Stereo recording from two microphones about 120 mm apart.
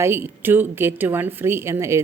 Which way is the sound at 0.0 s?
20° right (ahead or behind).